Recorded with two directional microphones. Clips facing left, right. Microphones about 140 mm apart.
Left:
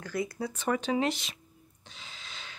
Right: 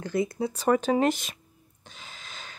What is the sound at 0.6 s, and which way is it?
Speech, 45° right (ahead or behind).